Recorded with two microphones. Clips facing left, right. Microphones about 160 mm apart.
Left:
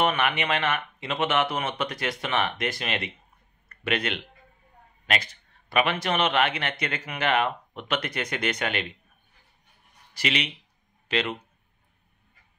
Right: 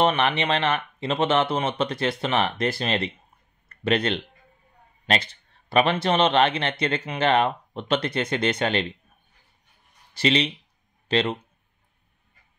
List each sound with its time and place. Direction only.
0.0 s a man's voice: 30° right (ahead or behind)
10.1 s a man's voice: 30° right (ahead or behind)